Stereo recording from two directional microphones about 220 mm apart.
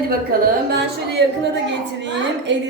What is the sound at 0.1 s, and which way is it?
A woman's voice, 40° right (ahead or behind).